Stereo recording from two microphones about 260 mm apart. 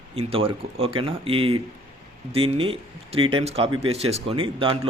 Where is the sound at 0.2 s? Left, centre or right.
Right.